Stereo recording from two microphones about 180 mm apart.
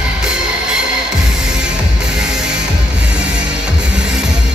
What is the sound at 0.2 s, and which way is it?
Music, 5° right (ahead or behind).